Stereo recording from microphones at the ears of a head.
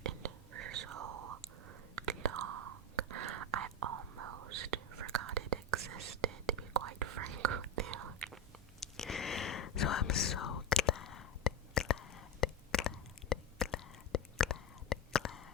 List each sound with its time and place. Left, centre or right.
0.0 s whispering: right
8.8 s whispering: left